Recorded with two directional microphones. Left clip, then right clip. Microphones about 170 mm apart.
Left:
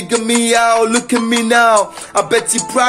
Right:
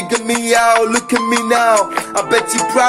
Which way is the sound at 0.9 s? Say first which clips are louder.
Even; 45° right (ahead or behind).